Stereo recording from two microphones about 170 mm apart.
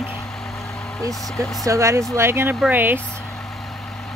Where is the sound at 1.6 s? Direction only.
20° right (ahead or behind).